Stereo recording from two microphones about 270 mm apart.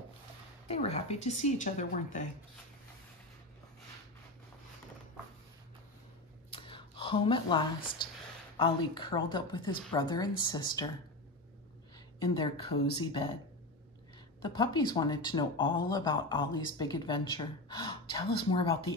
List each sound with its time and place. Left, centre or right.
0.7 s speech: left
6.5 s a sound: centre
8.5 s speech: centre
12.2 s speech: centre
14.4 s speech: centre